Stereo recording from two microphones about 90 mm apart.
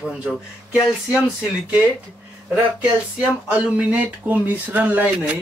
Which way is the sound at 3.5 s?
15° right (ahead or behind).